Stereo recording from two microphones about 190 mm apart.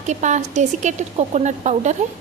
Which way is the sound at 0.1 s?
40° right (ahead or behind).